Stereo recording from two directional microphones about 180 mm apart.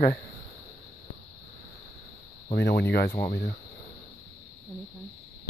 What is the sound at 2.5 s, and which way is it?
Speech, 65° left (ahead or behind).